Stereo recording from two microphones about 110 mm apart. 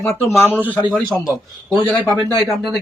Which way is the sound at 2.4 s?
Centre (ahead or behind).